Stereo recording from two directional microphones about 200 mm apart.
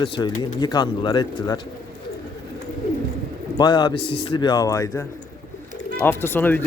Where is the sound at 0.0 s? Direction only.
20° left (ahead or behind).